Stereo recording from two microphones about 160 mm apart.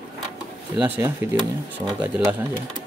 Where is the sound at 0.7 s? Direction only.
10° right (ahead or behind).